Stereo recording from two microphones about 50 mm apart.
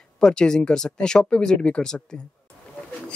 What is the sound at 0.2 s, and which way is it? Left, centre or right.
Speech, centre.